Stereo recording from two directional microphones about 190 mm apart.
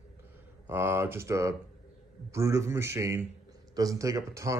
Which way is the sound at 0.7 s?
15° right (ahead or behind).